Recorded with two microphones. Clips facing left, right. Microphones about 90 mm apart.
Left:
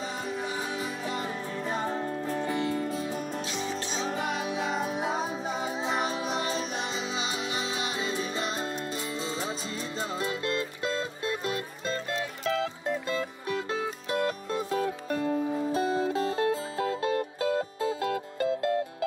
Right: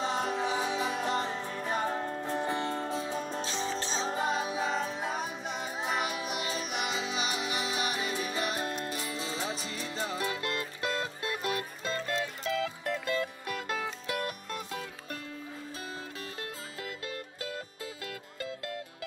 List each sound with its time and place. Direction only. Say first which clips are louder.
0.0 s music: right 3 dB; 70° right (ahead or behind); by 0.9 s 90° right
2.0 s music: left 2 dB; 25° right (ahead or behind)
4.6 s music: left 3 dB; 10° left (ahead or behind)
5.9 s music: left 2 dB; 30° left (ahead or behind)
9.9 s music: left 1 dB; 30° left (ahead or behind)